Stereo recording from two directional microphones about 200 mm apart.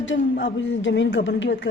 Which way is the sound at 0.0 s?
65° left (ahead or behind).